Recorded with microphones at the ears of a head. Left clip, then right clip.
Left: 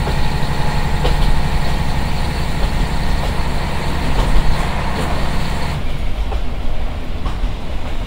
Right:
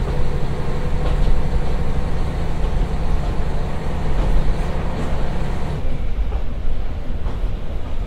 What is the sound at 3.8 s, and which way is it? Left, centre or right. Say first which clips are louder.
Vehicle: left 6 dB; left.